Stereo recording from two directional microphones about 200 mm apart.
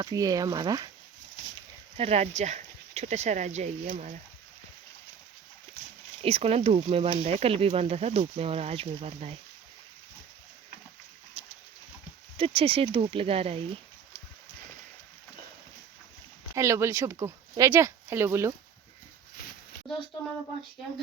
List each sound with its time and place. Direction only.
0.0 s speech: 20° right (ahead or behind)
2.0 s speech: 30° right (ahead or behind)
6.2 s speech: 30° right (ahead or behind)
12.4 s speech: 30° right (ahead or behind)
16.6 s speech: 15° right (ahead or behind)